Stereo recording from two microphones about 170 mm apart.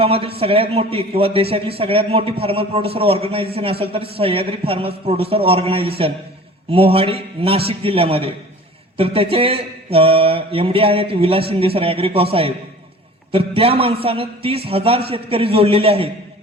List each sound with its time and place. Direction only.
0.0 s a man's voice: 35° right (ahead or behind)